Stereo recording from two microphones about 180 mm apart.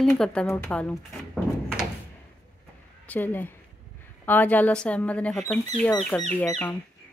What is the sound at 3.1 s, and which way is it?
Speech, 10° left (ahead or behind).